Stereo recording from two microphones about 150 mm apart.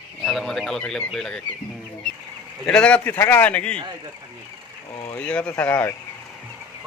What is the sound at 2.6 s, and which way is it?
Speech, 5° left (ahead or behind).